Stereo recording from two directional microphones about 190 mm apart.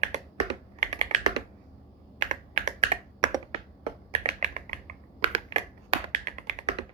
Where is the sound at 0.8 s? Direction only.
35° right (ahead or behind).